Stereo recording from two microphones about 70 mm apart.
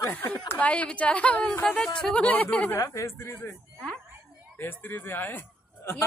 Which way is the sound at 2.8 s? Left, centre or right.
Left.